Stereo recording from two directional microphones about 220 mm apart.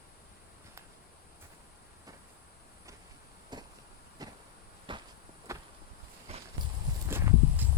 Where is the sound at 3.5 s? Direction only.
20° right (ahead or behind).